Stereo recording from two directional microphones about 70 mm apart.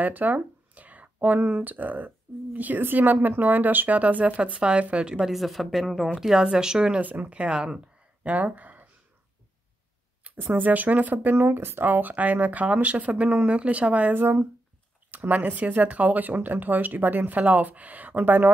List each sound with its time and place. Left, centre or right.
0.0 s speech: right
5.3 s a woman's voice: centre
7.0 s speech: right
10.3 s speech: right